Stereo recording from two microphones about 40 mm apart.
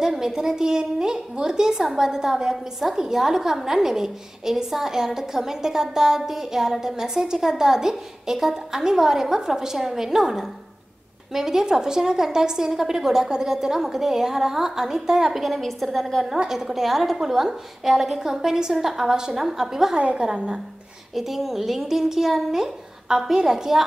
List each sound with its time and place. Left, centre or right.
0.0 s a woman's voice: centre
15.4 s a woman's voice: centre
16.3 s a woman's voice: centre
20.0 s a woman's voice: right
21.1 s a woman's voice: centre